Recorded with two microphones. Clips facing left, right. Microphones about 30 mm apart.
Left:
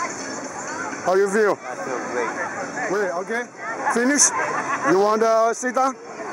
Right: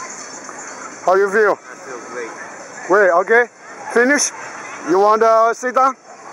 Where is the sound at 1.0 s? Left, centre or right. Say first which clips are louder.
Right 5 dB; centre.